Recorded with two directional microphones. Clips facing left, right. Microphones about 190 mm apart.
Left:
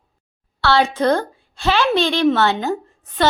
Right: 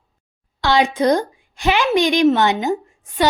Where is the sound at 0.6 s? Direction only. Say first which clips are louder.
Even; 15° right (ahead or behind).